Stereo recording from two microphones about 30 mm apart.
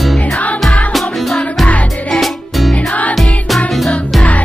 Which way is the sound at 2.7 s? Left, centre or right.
Left.